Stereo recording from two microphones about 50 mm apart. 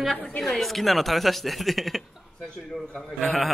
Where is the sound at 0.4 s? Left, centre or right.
Centre.